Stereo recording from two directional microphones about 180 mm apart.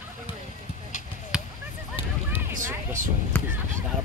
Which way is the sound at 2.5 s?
45° right (ahead or behind).